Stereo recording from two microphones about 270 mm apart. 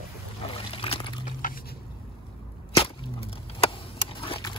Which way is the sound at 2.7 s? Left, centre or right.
Left.